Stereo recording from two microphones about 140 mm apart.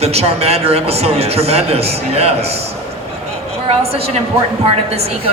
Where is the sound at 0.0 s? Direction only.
50° right (ahead or behind).